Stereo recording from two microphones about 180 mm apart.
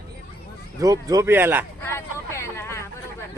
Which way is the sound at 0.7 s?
20° right (ahead or behind).